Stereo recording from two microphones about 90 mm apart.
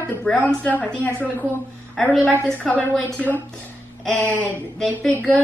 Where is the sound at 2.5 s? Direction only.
15° left (ahead or behind).